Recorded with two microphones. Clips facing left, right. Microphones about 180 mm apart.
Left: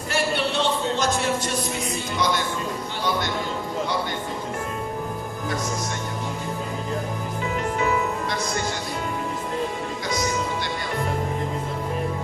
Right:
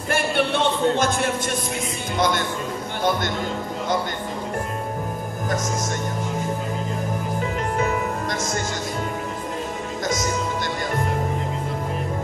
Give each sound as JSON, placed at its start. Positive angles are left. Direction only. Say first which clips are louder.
{"t": 0.1, "sound": "music", "louder": "right 3 dB", "side_deg": -50}
{"t": 2.1, "sound": "a man's voice", "louder": "right 3 dB", "side_deg": -50}
{"t": 7.8, "sound": "music", "louder": "even", "side_deg": -45}